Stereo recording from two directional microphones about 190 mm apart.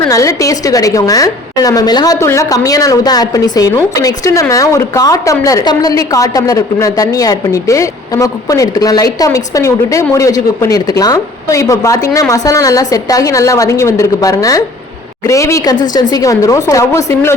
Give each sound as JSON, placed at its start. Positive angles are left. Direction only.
{"t": 0.1, "sound": "a woman's voice", "side_deg": 15}